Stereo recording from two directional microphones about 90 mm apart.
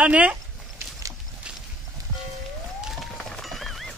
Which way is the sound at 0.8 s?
30° right (ahead or behind).